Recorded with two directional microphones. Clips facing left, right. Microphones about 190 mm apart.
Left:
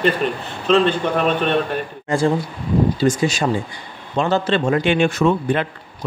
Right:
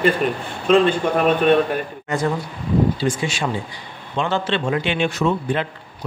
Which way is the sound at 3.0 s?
40° left (ahead or behind).